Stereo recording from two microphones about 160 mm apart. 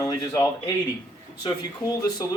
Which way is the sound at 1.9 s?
20° left (ahead or behind).